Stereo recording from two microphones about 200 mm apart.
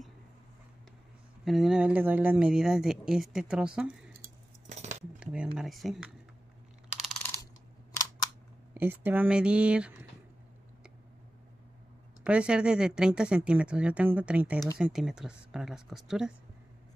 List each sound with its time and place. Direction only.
1.4 s speech: centre (ahead or behind)
4.6 s cutlery: 35° right (ahead or behind)
5.2 s speech: 5° right (ahead or behind)
8.7 s speech: 10° right (ahead or behind)
12.2 s speech: 5° right (ahead or behind)